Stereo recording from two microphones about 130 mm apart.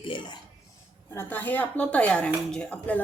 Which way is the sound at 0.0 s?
40° left (ahead or behind).